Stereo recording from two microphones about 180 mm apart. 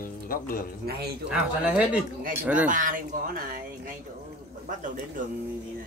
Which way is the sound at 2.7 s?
45° right (ahead or behind).